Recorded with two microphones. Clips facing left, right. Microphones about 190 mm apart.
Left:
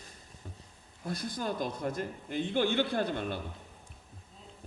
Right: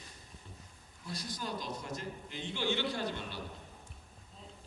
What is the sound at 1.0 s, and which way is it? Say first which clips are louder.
A man's voice: left 6 dB; 55° left (ahead or behind).